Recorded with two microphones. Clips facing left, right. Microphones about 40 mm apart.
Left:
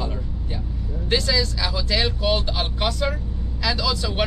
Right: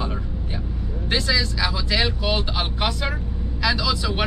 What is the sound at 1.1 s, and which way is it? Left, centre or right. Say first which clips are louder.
Speech: left 1 dB; centre.